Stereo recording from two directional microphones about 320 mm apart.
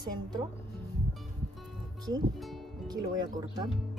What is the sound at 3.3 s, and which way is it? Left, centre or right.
Speech, centre.